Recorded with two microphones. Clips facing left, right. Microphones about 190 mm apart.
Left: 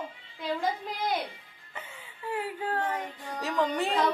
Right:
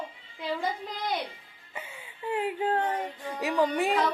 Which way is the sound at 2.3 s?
20° right (ahead or behind).